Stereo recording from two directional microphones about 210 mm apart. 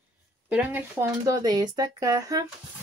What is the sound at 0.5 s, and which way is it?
Speech, 10° right (ahead or behind).